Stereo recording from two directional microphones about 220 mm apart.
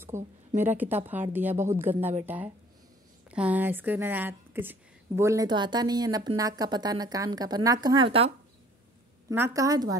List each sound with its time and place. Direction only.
0.1 s speech: 10° right (ahead or behind)
9.3 s speech: 10° right (ahead or behind)